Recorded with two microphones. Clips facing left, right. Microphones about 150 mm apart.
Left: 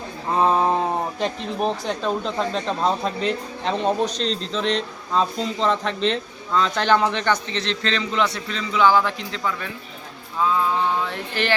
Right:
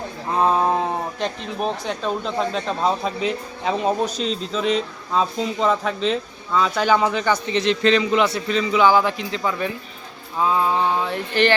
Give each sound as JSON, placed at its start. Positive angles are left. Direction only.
{"t": 0.3, "sound": "speech", "side_deg": 0}
{"t": 10.4, "sound": "mantra", "side_deg": -15}
{"t": 11.1, "sound": "speech", "side_deg": 5}